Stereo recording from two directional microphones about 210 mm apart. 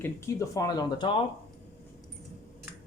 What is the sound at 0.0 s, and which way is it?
Speech, 15° left (ahead or behind).